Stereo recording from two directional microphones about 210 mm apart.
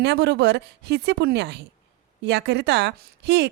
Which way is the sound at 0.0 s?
55° right (ahead or behind).